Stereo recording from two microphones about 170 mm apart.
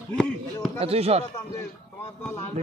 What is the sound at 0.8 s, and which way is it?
Speech, 35° right (ahead or behind).